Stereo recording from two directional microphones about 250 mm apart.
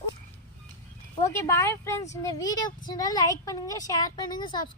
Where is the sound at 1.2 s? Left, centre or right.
Centre.